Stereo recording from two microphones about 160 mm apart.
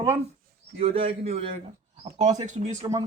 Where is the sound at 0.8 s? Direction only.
35° right (ahead or behind).